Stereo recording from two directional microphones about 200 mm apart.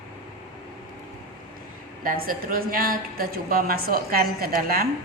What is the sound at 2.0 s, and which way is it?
A woman's voice, 45° right (ahead or behind).